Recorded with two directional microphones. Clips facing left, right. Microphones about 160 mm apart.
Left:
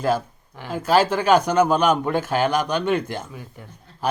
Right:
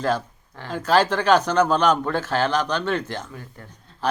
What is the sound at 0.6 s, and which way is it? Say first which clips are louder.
A man's voice: left 1 dB; 10° left (ahead or behind).